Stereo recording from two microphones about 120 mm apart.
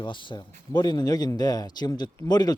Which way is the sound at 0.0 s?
40° left (ahead or behind).